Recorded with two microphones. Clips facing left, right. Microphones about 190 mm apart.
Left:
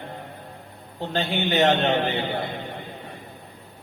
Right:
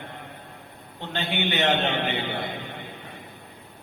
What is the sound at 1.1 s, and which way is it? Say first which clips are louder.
Mantra: left 4 dB; 35° left (ahead or behind).